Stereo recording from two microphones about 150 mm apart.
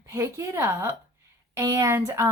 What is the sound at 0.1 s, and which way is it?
A woman's voice, 20° right (ahead or behind).